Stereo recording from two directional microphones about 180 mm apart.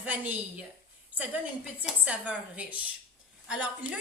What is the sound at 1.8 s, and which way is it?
Speech, 5° right (ahead or behind).